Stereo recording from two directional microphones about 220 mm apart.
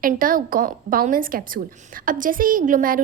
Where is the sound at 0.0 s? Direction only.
40° right (ahead or behind).